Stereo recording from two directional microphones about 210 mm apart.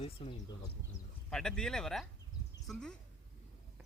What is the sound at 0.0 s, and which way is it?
Speech, 25° left (ahead or behind).